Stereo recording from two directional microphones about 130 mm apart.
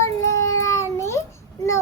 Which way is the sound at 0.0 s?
25° left (ahead or behind).